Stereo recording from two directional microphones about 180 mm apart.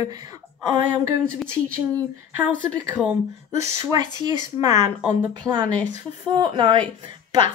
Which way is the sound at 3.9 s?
20° right (ahead or behind).